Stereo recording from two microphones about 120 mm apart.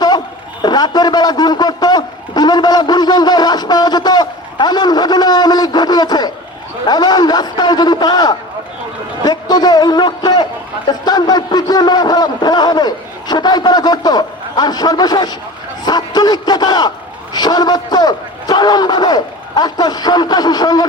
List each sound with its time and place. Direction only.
0.6 s a man's voice: 35° left (ahead or behind)